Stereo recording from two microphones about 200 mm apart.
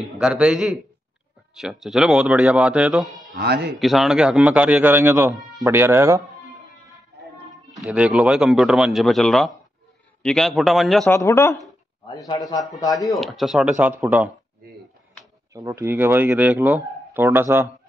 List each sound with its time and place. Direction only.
0.0 s a man's voice: 5° right (ahead or behind)
3.3 s speech: 55° right (ahead or behind)
3.8 s speech: centre (ahead or behind)
7.8 s a man's voice: 5° right (ahead or behind)
11.1 s speech: 15° left (ahead or behind)
13.1 s a man's voice: centre (ahead or behind)
15.5 s speech: 15° right (ahead or behind)